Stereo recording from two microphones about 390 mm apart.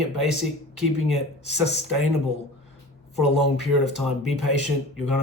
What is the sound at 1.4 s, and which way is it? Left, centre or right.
Speech, right.